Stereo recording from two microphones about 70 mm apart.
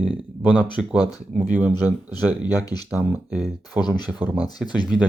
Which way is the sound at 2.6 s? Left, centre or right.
Left.